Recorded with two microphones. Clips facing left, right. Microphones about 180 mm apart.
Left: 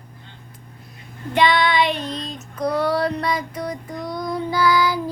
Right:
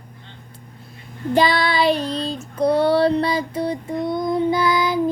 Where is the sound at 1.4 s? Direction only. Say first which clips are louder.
Even; 35° right (ahead or behind).